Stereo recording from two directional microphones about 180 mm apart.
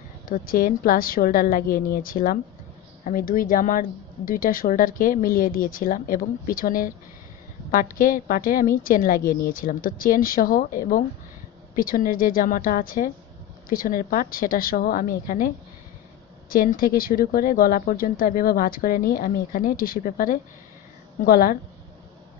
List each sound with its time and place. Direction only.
0.3 s speech: 50° left (ahead or behind)